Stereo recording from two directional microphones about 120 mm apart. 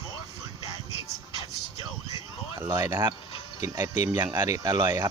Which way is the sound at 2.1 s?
25° right (ahead or behind).